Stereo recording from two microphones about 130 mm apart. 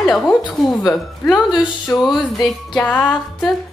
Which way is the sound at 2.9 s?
10° left (ahead or behind).